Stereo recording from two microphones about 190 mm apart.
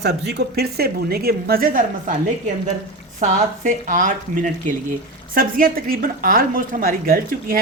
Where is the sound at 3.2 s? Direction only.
40° right (ahead or behind).